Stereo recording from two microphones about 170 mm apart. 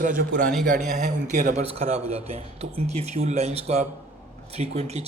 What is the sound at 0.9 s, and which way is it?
Speech, 50° right (ahead or behind).